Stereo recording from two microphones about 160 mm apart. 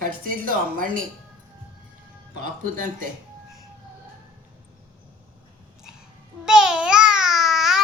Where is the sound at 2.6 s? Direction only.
55° right (ahead or behind).